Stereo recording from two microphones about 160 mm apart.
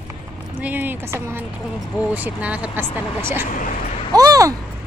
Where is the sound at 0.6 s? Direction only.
10° right (ahead or behind).